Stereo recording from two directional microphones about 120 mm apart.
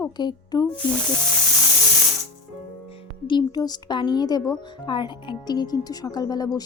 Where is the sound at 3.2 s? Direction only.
35° left (ahead or behind).